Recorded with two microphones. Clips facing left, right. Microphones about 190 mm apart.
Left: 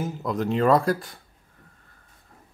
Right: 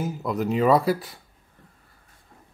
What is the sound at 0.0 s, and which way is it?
A man's voice, centre (ahead or behind).